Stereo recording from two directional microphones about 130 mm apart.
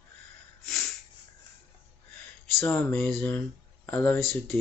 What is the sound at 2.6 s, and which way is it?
Speech, 10° left (ahead or behind).